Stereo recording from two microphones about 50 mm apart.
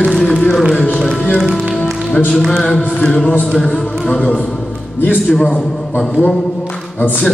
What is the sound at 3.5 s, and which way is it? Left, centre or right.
Music, centre.